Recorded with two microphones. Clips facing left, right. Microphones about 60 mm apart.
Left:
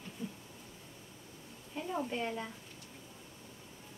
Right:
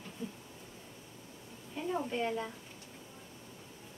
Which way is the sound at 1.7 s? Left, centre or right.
Centre.